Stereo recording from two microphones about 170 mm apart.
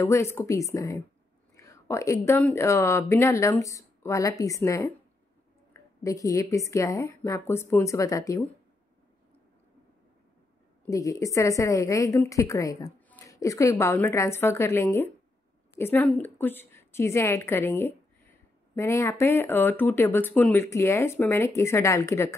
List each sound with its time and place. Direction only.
0.0 s a woman's voice: 15° left (ahead or behind)
10.9 s a woman's voice: 20° left (ahead or behind)